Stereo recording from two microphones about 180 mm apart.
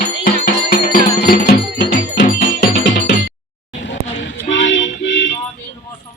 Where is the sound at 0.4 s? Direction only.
50° left (ahead or behind).